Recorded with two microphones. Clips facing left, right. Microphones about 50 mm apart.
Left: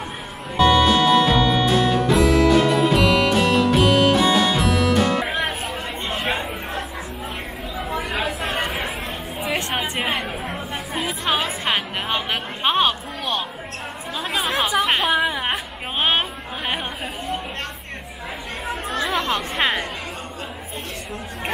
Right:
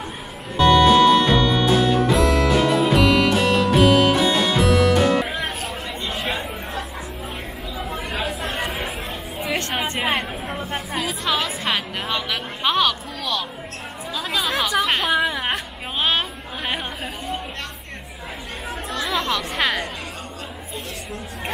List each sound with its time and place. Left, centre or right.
0.6 s music: centre
5.3 s music: left
6.2 s chatter: centre
8.4 s chatter: centre
9.4 s chatter: centre
11.0 s music: left
14.7 s a sound: left
15.0 s a sound: centre
16.0 s chatter: left
16.6 s chatter: centre
18.9 s chatter: left
19.5 s music: left